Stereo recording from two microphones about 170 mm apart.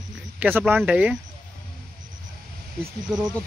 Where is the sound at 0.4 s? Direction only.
10° right (ahead or behind).